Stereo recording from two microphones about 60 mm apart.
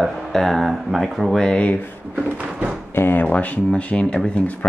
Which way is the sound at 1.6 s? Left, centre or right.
Left.